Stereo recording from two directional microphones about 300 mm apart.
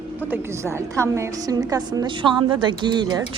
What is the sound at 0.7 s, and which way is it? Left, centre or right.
A woman's voice, centre.